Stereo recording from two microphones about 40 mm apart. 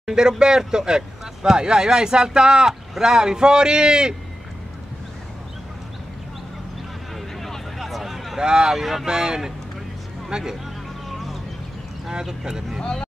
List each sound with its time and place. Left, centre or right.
0.0 s a man's voice: centre
7.3 s a sound: centre
7.8 s a sound: centre
8.4 s speech: centre
8.7 s speech: centre
9.0 s speech: centre
12.1 s speech: centre